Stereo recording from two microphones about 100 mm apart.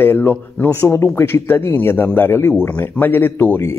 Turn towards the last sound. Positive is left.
turn(degrees=20)  # may be behind; listen again after turning